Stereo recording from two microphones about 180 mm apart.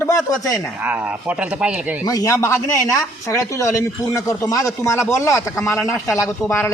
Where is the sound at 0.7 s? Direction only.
10° right (ahead or behind).